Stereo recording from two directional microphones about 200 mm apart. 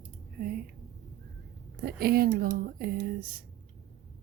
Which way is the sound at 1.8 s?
50° right (ahead or behind).